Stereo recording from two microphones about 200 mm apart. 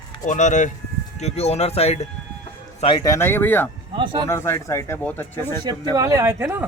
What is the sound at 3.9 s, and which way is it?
Speech, 25° right (ahead or behind).